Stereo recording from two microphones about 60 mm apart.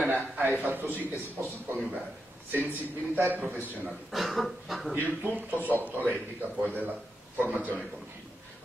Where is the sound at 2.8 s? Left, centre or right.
Right.